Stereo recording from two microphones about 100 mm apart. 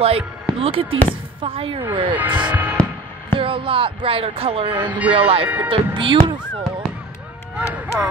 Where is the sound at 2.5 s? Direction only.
15° right (ahead or behind).